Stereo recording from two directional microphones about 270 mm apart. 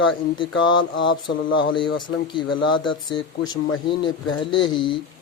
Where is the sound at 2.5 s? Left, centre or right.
Left.